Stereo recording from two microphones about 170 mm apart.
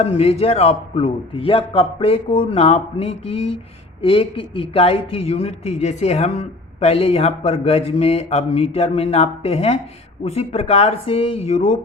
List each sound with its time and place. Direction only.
0.0 s speech: 35° left (ahead or behind)